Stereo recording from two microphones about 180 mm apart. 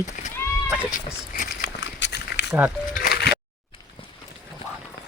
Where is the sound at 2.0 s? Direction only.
70° left (ahead or behind).